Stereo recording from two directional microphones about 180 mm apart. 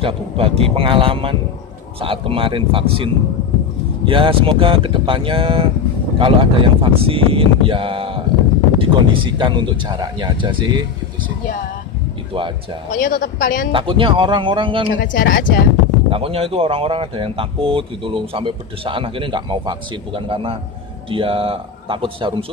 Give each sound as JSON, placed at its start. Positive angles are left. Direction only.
{"t": 0.0, "sound": "speech", "side_deg": -30}
{"t": 12.9, "sound": "a man's voice", "side_deg": 50}
{"t": 13.7, "sound": "speech", "side_deg": -30}
{"t": 15.0, "sound": "a man's voice", "side_deg": 50}
{"t": 16.1, "sound": "speech", "side_deg": -30}